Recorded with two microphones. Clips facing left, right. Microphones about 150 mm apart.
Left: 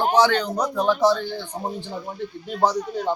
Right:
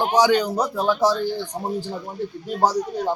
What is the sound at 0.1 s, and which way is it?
Speech, 10° right (ahead or behind).